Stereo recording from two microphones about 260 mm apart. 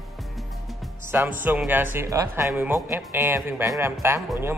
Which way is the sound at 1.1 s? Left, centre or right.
Centre.